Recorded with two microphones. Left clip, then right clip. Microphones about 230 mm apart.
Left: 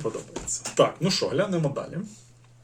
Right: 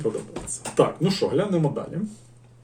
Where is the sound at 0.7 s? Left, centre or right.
Centre.